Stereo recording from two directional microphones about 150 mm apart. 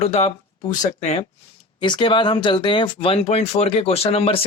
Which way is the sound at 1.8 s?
30° left (ahead or behind).